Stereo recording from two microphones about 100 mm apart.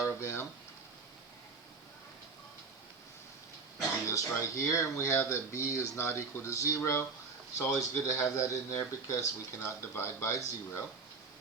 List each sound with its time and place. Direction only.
0.0 s speech: 30° left (ahead or behind)
3.8 s speech: 30° left (ahead or behind)